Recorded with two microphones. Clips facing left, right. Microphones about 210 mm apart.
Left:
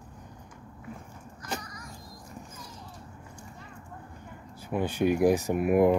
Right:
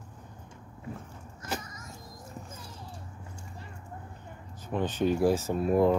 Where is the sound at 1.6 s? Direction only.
25° right (ahead or behind).